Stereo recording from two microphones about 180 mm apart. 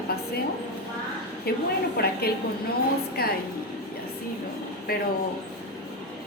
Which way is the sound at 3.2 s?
60° left (ahead or behind).